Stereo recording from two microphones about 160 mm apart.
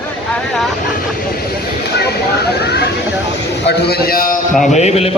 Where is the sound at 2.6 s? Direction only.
90° left; by 4.4 s 65° left (ahead or behind).